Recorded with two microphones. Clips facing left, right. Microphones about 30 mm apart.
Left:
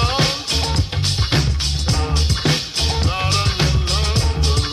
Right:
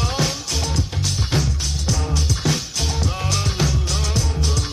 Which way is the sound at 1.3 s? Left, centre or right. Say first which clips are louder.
Left 2 dB; left.